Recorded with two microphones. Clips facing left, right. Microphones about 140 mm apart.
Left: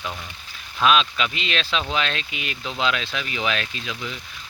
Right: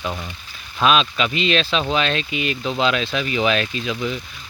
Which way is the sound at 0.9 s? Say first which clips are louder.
Right 2 dB; centre (ahead or behind).